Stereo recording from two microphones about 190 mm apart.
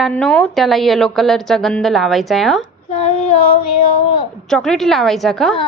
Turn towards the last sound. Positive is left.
turn(degrees=0)  # may be behind; listen again after turning